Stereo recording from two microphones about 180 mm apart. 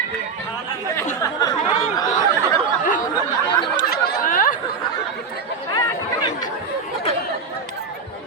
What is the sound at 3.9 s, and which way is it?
Chatter, 55° left (ahead or behind).